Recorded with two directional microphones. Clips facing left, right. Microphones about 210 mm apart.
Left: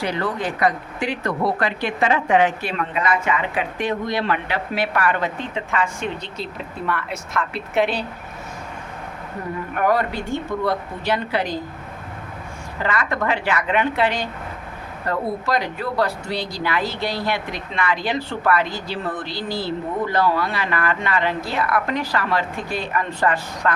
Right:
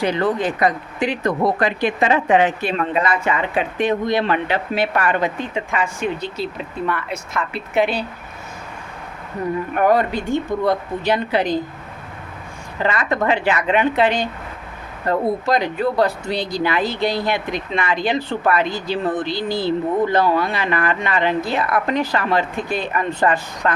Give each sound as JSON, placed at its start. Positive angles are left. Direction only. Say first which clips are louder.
{"t": 0.0, "sound": "speech", "louder": "right 5 dB", "side_deg": -20}
{"t": 5.4, "sound": "speech", "louder": "right 1 dB", "side_deg": -10}
{"t": 9.7, "sound": "speech", "louder": "right 3 dB", "side_deg": -20}
{"t": 12.8, "sound": "speech", "louder": "right 3 dB", "side_deg": -20}